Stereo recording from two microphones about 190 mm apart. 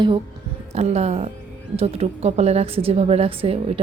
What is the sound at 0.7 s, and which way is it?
A woman's voice, 35° right (ahead or behind).